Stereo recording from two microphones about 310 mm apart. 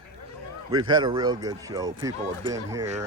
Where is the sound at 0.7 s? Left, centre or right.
Centre.